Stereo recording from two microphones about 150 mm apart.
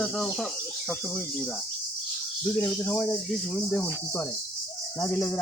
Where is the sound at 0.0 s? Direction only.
Centre (ahead or behind).